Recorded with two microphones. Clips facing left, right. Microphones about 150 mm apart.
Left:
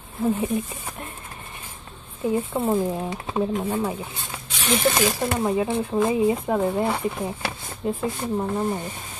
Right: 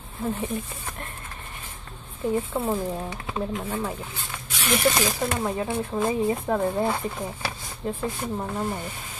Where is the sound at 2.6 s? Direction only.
15° left (ahead or behind).